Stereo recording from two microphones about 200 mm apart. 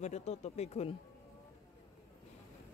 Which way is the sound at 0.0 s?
35° left (ahead or behind).